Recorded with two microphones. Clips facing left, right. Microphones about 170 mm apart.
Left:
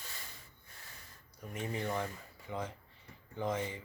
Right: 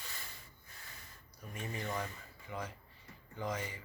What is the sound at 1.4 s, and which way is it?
Speech, 20° left (ahead or behind).